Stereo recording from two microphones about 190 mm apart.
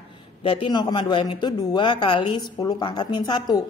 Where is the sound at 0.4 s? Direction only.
30° left (ahead or behind).